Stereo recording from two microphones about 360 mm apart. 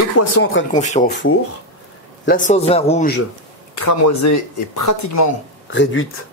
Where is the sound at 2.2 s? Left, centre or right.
Left.